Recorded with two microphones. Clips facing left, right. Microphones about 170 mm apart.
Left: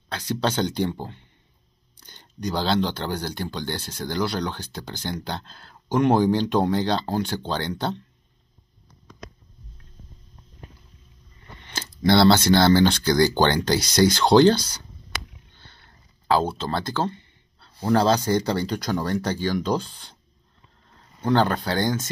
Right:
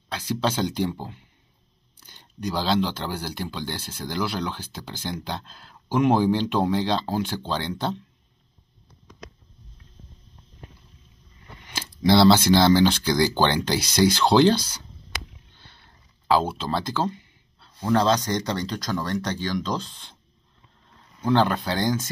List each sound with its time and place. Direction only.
0.4 s speech: 5° right (ahead or behind)
11.6 s speech: 5° right (ahead or behind)
16.3 s speech: 5° right (ahead or behind)
17.9 s speech: 10° left (ahead or behind)
21.2 s speech: 5° right (ahead or behind)